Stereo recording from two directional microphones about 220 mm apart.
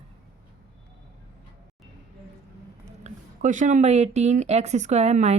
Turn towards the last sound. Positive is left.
turn(degrees=-30)  # may be behind; listen again after turning